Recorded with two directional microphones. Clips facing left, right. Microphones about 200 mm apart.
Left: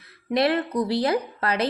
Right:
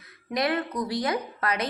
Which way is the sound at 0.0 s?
30° left (ahead or behind).